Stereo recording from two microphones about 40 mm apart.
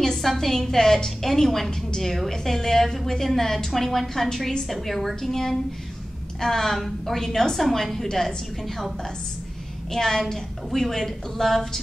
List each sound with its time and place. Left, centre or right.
0.2 s a woman's voice: centre
9.9 s a woman's voice: centre